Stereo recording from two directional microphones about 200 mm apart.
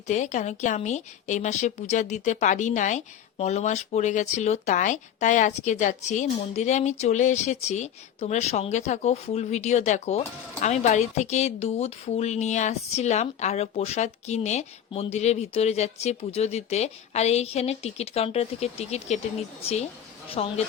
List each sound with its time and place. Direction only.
0.1 s a woman's voice: 35° left (ahead or behind)